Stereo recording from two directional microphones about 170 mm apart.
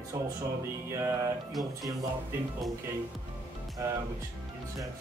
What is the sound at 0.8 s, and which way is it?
Speech, 15° right (ahead or behind).